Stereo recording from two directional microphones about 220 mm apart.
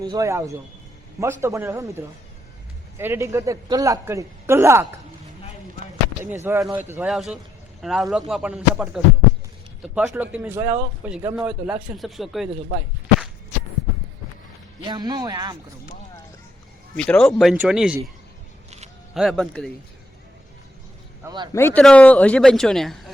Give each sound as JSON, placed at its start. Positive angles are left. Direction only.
{"t": 0.0, "sound": "a man's voice", "side_deg": -15}
{"t": 5.8, "sound": "a sound", "side_deg": -35}
{"t": 6.4, "sound": "a man's voice", "side_deg": -10}
{"t": 14.8, "sound": "a man's voice", "side_deg": -20}
{"t": 17.0, "sound": "speech", "side_deg": 5}
{"t": 19.1, "sound": "speech", "side_deg": 0}
{"t": 21.2, "sound": "speech", "side_deg": -20}
{"t": 21.5, "sound": "speech", "side_deg": 10}